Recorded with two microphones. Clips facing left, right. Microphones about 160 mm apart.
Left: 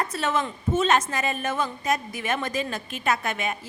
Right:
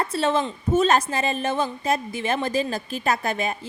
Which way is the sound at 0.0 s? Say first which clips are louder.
Right 4 dB; 30° right (ahead or behind).